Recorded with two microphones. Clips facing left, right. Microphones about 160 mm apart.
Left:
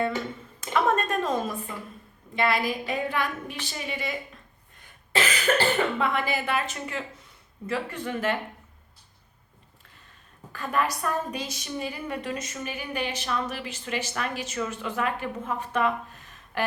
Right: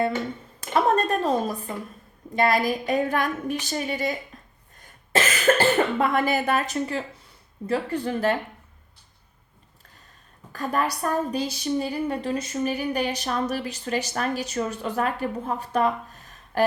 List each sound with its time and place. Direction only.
0.7 s a woman's voice: 35° right (ahead or behind)
4.3 s a sound: 40° right (ahead or behind)
4.8 s a woman's voice: 45° right (ahead or behind)
10.5 s a woman's voice: 40° right (ahead or behind)